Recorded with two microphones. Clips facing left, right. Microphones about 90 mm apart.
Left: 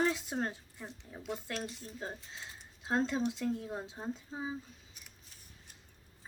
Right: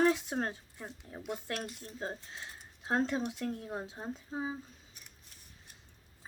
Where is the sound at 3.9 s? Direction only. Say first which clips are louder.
Right 1 dB; 5° right (ahead or behind).